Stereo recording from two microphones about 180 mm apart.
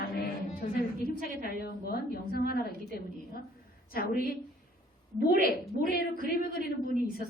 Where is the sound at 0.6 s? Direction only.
40° left (ahead or behind).